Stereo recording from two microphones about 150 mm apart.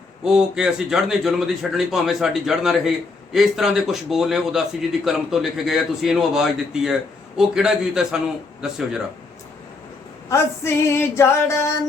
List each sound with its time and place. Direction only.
0.3 s a man's voice: 5° right (ahead or behind)
10.2 s female singing: 20° left (ahead or behind)